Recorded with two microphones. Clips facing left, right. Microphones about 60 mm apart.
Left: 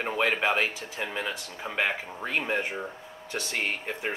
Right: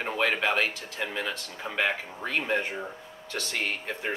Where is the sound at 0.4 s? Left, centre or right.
Centre.